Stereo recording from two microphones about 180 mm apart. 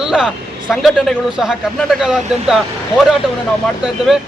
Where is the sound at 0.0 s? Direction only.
5° right (ahead or behind).